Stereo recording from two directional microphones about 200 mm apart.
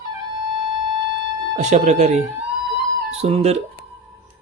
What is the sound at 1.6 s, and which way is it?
Speech, 35° right (ahead or behind).